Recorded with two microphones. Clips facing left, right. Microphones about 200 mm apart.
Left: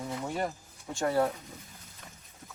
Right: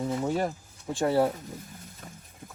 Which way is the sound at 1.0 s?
30° right (ahead or behind).